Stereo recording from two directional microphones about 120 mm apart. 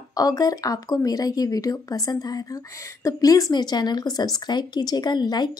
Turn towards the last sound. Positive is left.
turn(degrees=35)  # may be behind; listen again after turning